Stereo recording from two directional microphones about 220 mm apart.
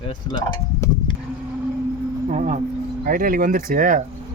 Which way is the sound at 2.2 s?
30° right (ahead or behind).